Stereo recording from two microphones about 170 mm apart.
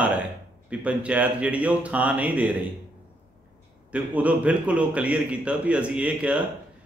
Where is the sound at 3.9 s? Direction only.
10° right (ahead or behind).